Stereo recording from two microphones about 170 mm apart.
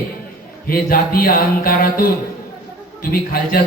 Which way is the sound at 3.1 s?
60° left (ahead or behind).